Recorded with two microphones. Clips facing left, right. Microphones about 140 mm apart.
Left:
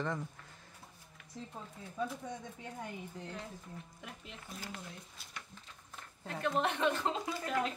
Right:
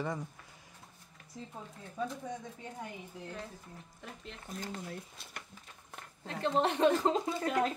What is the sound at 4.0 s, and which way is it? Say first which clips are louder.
Speech: right 2 dB; 5° left (ahead or behind).